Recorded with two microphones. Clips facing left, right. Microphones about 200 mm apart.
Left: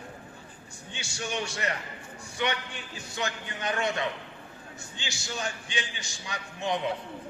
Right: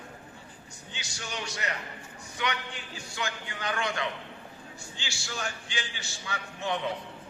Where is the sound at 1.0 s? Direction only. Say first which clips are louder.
Left 5 dB; 25° left (ahead or behind).